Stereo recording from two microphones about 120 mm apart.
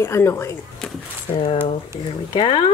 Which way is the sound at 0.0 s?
20° left (ahead or behind).